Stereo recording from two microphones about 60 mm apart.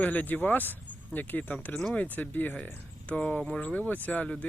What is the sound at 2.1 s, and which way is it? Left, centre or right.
Speech, left.